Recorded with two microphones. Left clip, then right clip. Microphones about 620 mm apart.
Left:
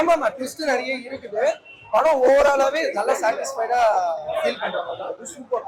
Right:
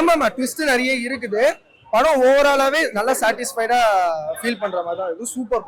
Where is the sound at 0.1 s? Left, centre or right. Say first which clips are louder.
Right 2 dB; right.